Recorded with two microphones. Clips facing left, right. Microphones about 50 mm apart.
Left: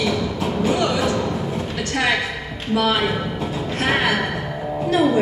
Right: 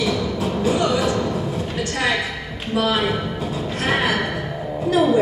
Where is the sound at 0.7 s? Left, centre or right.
Left.